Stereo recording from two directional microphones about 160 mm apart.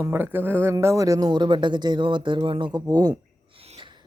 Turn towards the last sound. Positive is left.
turn(degrees=-35)  # may be behind; listen again after turning